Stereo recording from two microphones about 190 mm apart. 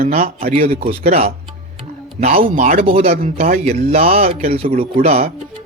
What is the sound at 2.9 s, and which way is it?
Speech, 30° right (ahead or behind).